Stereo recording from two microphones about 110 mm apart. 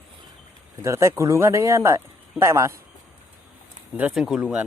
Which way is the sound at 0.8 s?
25° right (ahead or behind).